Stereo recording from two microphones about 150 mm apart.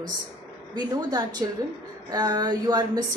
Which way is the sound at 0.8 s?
25° right (ahead or behind).